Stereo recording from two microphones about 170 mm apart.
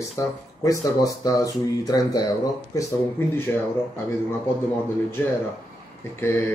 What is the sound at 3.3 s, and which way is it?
Speech, 15° left (ahead or behind).